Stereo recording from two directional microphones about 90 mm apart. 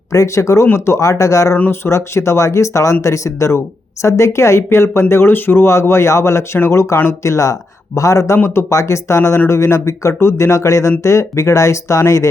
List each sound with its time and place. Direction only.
0.1 s speech: 35° left (ahead or behind)
1.5 s speech: 25° left (ahead or behind)